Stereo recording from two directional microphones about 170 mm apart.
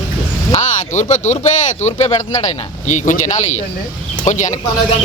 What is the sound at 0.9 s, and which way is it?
Speech, 45° left (ahead or behind).